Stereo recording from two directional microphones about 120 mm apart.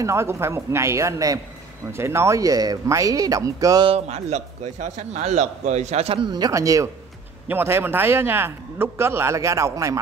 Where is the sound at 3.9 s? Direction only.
65° right (ahead or behind).